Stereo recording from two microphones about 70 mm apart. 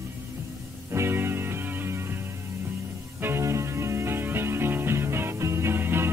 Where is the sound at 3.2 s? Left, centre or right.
Right.